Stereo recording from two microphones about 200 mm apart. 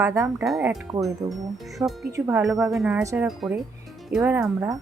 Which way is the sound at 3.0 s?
15° right (ahead or behind).